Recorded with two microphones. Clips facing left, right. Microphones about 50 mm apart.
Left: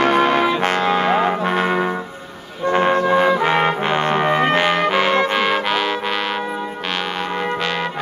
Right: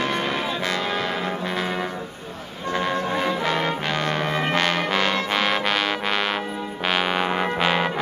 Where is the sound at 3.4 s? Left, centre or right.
Left.